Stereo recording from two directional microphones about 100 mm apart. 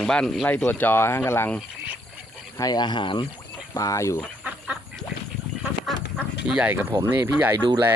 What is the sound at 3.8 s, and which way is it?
Speech, 30° left (ahead or behind).